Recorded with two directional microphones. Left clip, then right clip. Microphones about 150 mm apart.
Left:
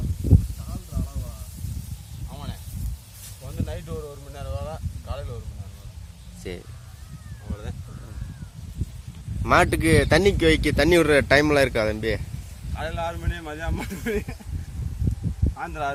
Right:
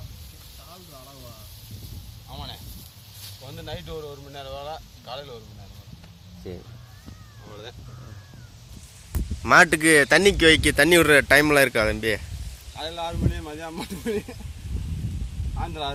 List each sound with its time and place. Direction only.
2.3 s a sound: 5° left (ahead or behind)
9.4 s speech: 5° left (ahead or behind)
15.5 s speech: 5° left (ahead or behind)